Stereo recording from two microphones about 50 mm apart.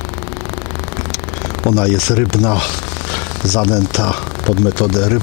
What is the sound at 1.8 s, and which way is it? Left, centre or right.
Speech, centre.